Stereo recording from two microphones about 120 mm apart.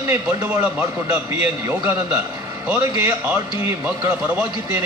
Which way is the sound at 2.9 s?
30° right (ahead or behind).